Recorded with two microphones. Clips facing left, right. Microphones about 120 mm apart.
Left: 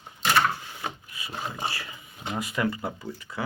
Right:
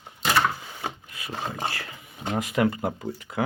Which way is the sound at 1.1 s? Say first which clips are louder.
Right 2 dB; 60° right (ahead or behind).